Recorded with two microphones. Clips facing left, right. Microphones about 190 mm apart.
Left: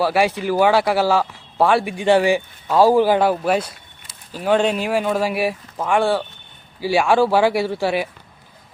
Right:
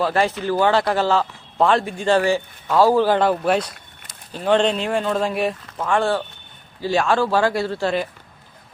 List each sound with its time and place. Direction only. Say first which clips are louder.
0.0 s a man's voice: left 2 dB; 10° left (ahead or behind)